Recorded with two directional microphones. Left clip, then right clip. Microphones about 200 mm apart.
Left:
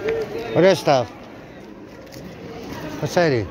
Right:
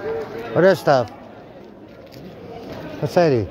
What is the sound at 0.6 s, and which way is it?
Speech, 25° right (ahead or behind).